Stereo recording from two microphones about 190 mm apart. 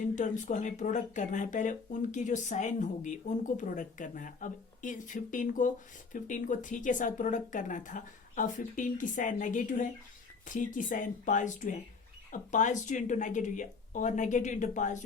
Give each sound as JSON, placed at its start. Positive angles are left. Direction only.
{"t": 0.0, "sound": "speech", "side_deg": 40}